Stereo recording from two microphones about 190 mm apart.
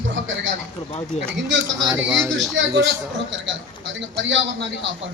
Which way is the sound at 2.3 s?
Centre (ahead or behind).